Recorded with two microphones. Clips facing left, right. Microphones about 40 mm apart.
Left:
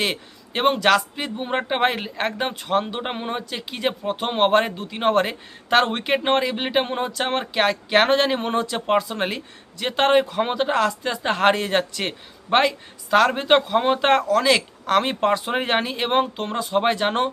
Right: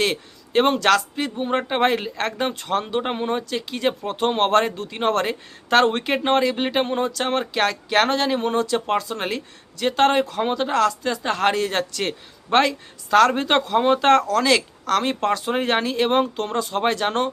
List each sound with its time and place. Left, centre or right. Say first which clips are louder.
0.0 s speech: right 2 dB; centre
14.8 s speech: left 2 dB; left